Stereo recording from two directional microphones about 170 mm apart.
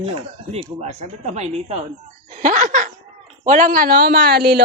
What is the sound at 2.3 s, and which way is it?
Laughter, 45° right (ahead or behind).